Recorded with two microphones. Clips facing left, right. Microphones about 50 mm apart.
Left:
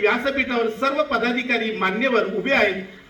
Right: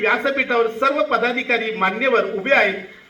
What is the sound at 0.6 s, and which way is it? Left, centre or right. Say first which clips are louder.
A man's voice: right 3 dB; right.